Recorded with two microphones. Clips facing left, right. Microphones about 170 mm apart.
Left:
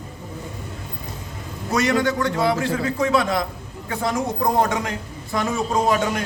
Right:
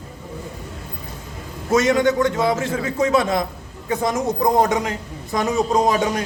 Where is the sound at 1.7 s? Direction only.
20° right (ahead or behind).